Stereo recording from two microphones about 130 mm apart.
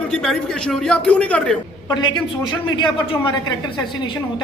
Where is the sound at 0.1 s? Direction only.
5° left (ahead or behind).